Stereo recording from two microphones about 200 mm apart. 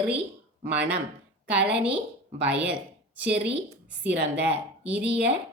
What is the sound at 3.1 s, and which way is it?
Speech, 5° right (ahead or behind).